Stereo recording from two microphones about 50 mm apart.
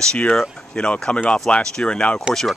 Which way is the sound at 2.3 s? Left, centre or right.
Centre.